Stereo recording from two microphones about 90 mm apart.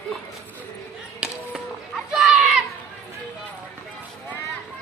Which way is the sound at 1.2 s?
10° right (ahead or behind).